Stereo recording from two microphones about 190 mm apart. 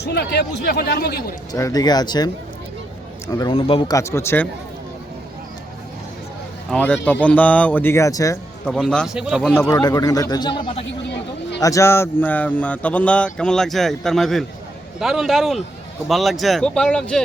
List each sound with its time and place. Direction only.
0.0 s speech: 60° left (ahead or behind)
1.5 s speech: 20° left (ahead or behind)
3.3 s speech: 25° left (ahead or behind)
3.9 s speech: 15° left (ahead or behind)
6.7 s speech: 5° left (ahead or behind)
8.6 s speech: 5° left (ahead or behind)
9.6 s speech: 20° left (ahead or behind)
11.6 s speech: 15° left (ahead or behind)